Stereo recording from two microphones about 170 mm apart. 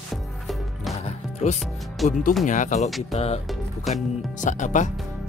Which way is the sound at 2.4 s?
45° left (ahead or behind).